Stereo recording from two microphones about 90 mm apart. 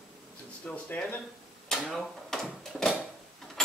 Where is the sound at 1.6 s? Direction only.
5° left (ahead or behind).